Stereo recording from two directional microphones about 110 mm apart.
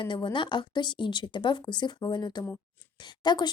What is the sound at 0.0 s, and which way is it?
Speech, 50° left (ahead or behind).